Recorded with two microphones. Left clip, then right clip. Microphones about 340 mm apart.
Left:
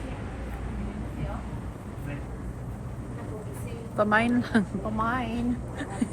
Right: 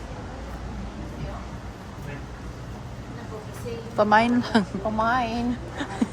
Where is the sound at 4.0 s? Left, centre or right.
Centre.